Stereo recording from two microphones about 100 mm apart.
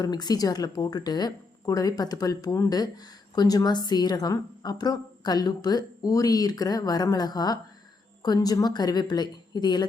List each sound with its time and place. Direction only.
0.0 s a woman's voice: 45° left (ahead or behind)